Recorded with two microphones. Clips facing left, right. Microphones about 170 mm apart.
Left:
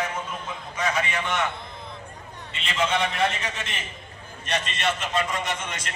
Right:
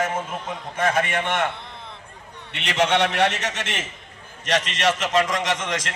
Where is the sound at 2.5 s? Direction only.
75° right (ahead or behind); by 5.9 s 90° right.